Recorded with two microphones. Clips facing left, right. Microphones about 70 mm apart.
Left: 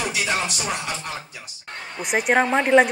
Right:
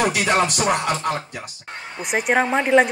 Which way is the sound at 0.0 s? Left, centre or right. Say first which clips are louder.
Right 6 dB; right.